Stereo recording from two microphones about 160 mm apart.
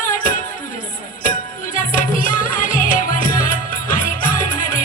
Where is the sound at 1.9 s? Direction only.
55° left (ahead or behind).